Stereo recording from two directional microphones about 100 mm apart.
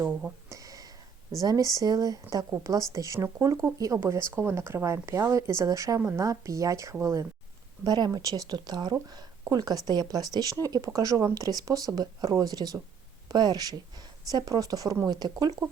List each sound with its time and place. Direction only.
0.0 s speech: 15° right (ahead or behind)
0.5 s a sound: 35° right (ahead or behind)
1.4 s speech: 35° right (ahead or behind)
7.9 s speech: 45° right (ahead or behind)